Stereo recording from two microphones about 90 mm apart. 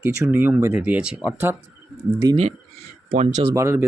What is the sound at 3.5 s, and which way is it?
Speech, 30° right (ahead or behind).